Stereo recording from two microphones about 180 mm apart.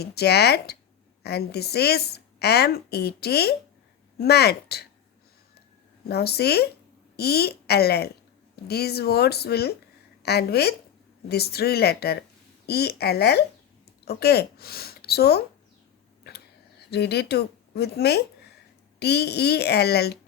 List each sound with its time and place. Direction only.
0.0 s a woman's voice: 65° left (ahead or behind)
6.1 s a woman's voice: 65° left (ahead or behind)
16.9 s a woman's voice: 65° left (ahead or behind)